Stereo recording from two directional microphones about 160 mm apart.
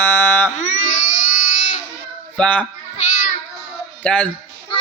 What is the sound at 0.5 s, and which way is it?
Baby cry, 50° left (ahead or behind).